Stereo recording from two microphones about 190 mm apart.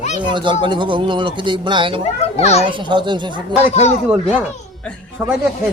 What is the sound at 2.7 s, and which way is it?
Speech, 25° right (ahead or behind).